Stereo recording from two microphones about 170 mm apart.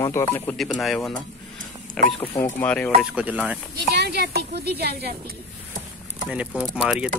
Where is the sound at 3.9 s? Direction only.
75° right (ahead or behind).